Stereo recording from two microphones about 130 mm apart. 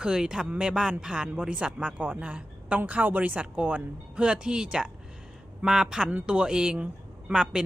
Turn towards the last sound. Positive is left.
turn(degrees=-5)  # may be behind; listen again after turning